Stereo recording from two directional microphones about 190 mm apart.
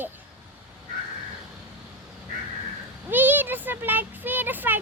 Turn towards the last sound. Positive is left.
turn(degrees=-10)  # may be behind; listen again after turning